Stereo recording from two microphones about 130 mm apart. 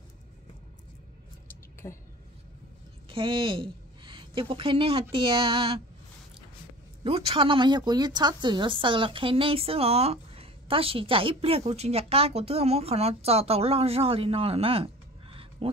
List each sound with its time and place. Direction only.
1.8 s a woman's voice: 20° left (ahead or behind)
3.1 s a woman's voice: 40° right (ahead or behind)
5.1 s a sound: 40° right (ahead or behind)
7.0 s a woman's voice: 45° right (ahead or behind)